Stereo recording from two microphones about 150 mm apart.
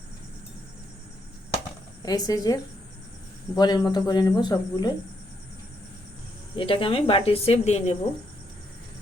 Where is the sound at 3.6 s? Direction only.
30° left (ahead or behind).